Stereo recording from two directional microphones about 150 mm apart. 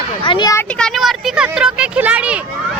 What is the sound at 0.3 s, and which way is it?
Speech, 30° left (ahead or behind).